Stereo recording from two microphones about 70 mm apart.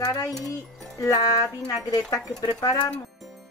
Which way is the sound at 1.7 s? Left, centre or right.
Left.